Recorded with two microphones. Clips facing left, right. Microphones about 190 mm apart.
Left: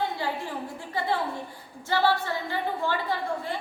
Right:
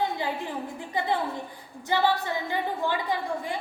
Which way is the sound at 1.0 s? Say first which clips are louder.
Right 1 dB; 20° right (ahead or behind).